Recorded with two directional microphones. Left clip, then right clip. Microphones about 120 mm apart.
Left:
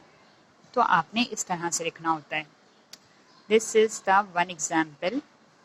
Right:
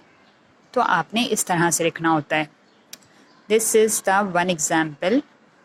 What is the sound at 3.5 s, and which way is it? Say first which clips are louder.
A woman's voice: right 4 dB; 35° right (ahead or behind).